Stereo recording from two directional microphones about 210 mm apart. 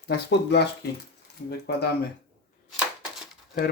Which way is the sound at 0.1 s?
55° left (ahead or behind).